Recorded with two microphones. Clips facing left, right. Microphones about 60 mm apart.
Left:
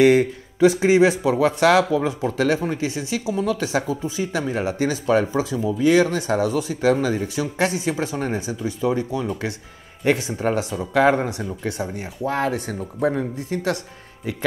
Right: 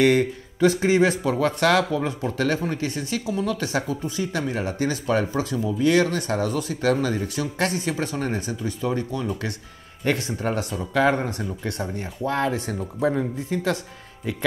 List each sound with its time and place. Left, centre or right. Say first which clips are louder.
0.0 s speech: left 4 dB; centre